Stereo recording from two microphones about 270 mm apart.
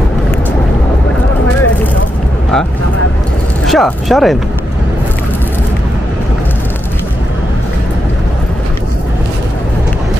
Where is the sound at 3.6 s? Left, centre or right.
Centre.